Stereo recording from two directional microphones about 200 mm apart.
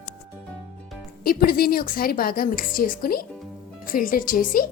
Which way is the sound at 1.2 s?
50° left (ahead or behind).